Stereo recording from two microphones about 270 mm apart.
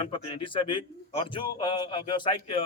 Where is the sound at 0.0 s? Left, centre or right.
Centre.